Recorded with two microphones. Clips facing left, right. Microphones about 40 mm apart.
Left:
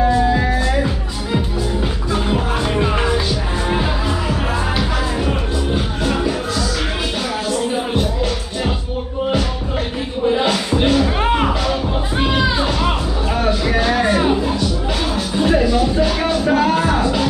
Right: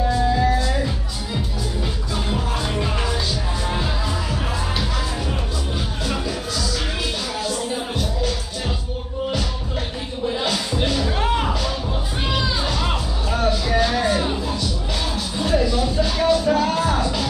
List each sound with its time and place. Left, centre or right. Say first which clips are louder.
0.0 s music: left 4 dB; left
10.2 s music: left 6 dB; left